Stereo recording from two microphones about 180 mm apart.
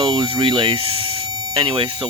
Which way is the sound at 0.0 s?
30° right (ahead or behind).